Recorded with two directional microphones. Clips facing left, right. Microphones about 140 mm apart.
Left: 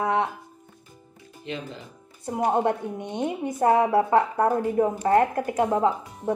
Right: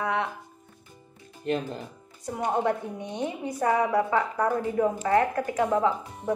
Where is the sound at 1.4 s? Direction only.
45° right (ahead or behind).